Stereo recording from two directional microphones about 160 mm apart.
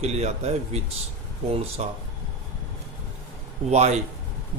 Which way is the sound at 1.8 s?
45° right (ahead or behind).